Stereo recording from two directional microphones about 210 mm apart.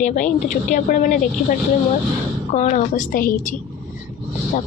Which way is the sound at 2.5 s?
35° left (ahead or behind).